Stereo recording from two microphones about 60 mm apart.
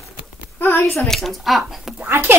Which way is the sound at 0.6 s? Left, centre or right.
Left.